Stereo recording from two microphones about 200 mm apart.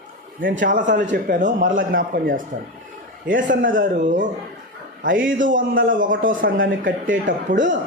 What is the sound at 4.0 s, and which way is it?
Speech, 40° right (ahead or behind).